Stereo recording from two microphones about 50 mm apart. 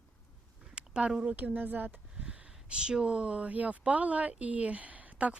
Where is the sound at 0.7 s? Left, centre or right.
Centre.